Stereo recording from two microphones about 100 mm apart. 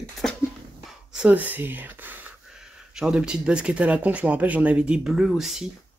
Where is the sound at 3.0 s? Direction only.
5° right (ahead or behind).